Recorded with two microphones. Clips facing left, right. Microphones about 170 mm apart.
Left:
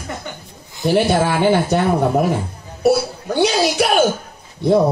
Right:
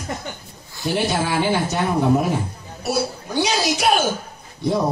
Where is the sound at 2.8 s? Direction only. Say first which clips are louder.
Left 8 dB; 55° left (ahead or behind).